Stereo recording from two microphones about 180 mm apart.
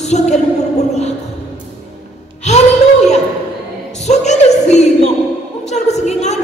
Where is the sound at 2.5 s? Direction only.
40° left (ahead or behind).